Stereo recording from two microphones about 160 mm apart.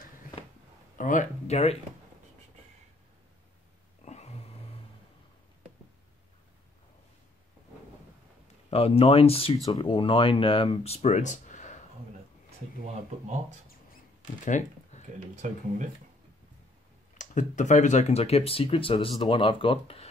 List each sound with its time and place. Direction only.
0.9 s speech: 55° left (ahead or behind)
4.0 s a sound: 45° left (ahead or behind)
8.6 s speech: 40° left (ahead or behind)
14.2 s a sound: 50° left (ahead or behind)
15.3 s speech: 50° right (ahead or behind)
17.2 s speech: 50° left (ahead or behind); by 20.1 s 35° left (ahead or behind)